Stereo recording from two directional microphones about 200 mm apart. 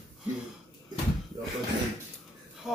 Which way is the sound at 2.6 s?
Centre (ahead or behind).